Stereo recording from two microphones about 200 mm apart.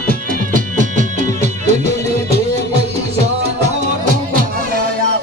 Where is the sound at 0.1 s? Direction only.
40° right (ahead or behind).